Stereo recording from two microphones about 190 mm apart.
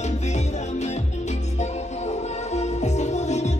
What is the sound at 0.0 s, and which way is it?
Music, 35° left (ahead or behind).